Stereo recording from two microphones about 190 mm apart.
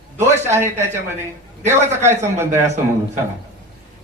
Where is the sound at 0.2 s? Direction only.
15° right (ahead or behind).